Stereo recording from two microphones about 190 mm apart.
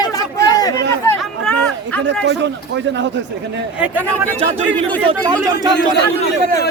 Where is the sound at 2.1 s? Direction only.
65° right (ahead or behind).